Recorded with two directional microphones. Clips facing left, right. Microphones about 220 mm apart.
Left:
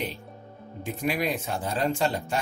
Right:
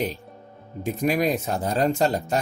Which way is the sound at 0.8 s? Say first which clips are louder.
Right 5 dB; 40° right (ahead or behind).